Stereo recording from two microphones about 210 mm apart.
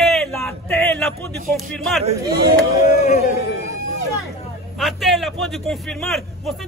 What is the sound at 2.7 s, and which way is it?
Speech, 45° left (ahead or behind).